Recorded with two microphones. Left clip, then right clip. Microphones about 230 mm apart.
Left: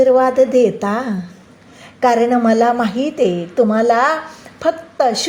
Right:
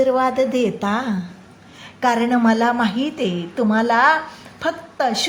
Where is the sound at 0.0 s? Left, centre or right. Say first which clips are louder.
Left 6 dB; centre.